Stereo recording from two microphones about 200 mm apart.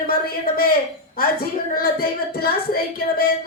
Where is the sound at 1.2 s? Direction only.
45° left (ahead or behind).